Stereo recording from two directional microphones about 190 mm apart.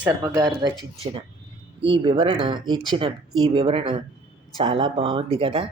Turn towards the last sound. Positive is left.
turn(degrees=-30)  # may be behind; listen again after turning